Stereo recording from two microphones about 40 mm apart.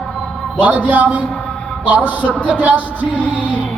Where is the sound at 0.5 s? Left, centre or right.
Right.